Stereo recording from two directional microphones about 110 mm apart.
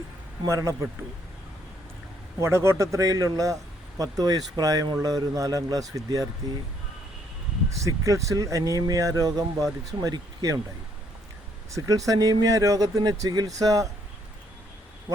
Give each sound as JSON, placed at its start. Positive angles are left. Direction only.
{"t": 0.4, "sound": "speech", "side_deg": -30}
{"t": 2.4, "sound": "speech", "side_deg": -25}
{"t": 7.9, "sound": "speech", "side_deg": -30}
{"t": 11.7, "sound": "speech", "side_deg": -30}